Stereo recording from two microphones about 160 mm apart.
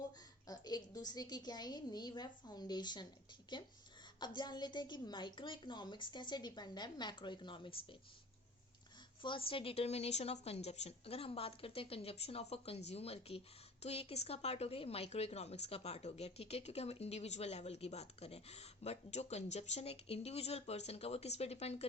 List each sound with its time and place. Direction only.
0.4 s a woman's voice: 25° left (ahead or behind)
9.2 s a woman's voice: 35° left (ahead or behind)